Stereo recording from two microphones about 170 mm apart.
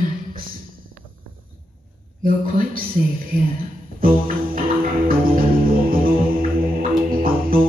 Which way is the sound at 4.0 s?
55° right (ahead or behind).